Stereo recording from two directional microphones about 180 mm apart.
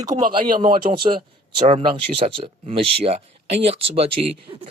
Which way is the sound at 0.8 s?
45° right (ahead or behind).